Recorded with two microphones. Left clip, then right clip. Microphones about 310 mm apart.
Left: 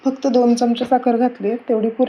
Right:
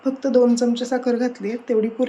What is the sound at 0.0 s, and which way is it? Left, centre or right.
Speech, centre.